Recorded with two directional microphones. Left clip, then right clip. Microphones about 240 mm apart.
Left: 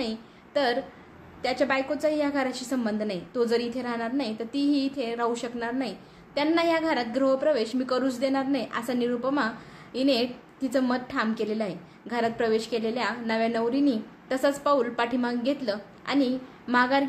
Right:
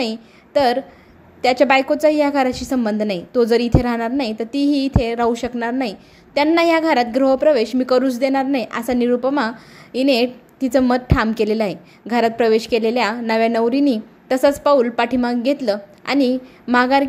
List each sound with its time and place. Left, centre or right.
0.0 s a woman's voice: right